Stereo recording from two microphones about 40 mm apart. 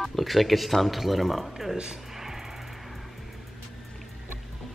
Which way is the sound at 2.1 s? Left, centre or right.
Centre.